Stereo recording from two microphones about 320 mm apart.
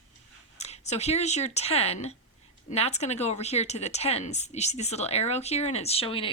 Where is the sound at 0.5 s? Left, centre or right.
Centre.